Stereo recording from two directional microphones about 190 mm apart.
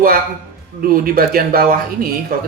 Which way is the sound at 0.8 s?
50° right (ahead or behind).